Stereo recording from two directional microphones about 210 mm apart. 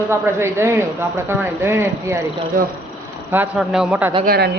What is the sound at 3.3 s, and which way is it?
Speech, 5° right (ahead or behind).